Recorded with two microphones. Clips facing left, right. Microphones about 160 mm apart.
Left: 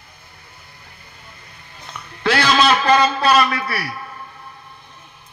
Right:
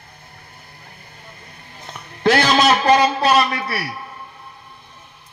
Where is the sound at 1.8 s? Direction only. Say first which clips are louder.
Right 4 dB; 40° right (ahead or behind).